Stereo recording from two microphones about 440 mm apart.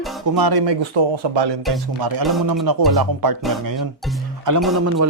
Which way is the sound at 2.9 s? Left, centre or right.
Right.